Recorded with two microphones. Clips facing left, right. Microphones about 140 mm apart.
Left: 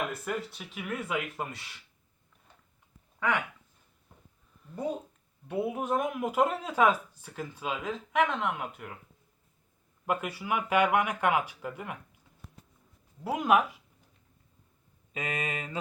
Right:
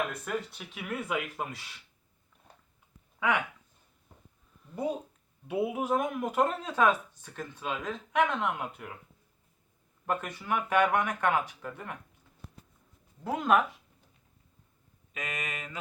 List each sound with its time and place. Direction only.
0.1 s speech: centre (ahead or behind)
4.6 s speech: 10° right (ahead or behind)
10.1 s speech: 10° left (ahead or behind)
13.2 s speech: 10° left (ahead or behind)
15.1 s mantra: 30° left (ahead or behind)